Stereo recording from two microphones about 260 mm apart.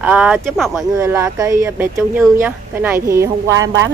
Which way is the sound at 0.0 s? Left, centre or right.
Centre.